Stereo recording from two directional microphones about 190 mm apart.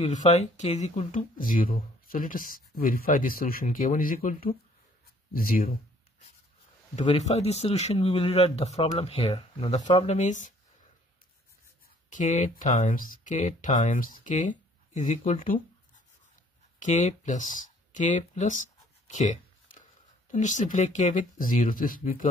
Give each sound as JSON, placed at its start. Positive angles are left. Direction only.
{"t": 0.0, "sound": "speech", "side_deg": 35}
{"t": 7.0, "sound": "speech", "side_deg": 35}
{"t": 12.1, "sound": "speech", "side_deg": 40}
{"t": 16.8, "sound": "speech", "side_deg": 40}